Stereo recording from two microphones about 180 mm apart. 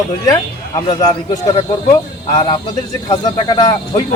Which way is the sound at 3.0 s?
25° left (ahead or behind).